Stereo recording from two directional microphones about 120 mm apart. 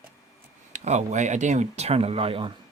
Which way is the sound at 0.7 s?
75° right (ahead or behind).